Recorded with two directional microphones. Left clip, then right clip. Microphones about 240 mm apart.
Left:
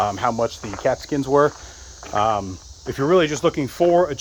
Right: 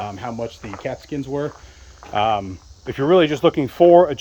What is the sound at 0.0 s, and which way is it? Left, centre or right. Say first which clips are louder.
Speech: left 7 dB; centre.